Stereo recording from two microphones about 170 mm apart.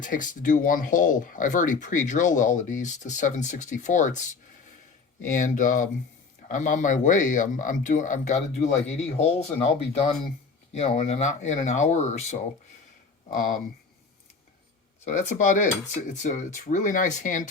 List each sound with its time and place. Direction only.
0.0 s speech: 50° left (ahead or behind)
5.2 s speech: 50° left (ahead or behind)
15.0 s speech: 45° left (ahead or behind)